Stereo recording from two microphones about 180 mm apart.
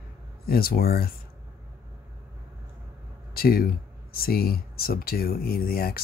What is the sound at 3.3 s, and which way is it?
Speech, 55° left (ahead or behind).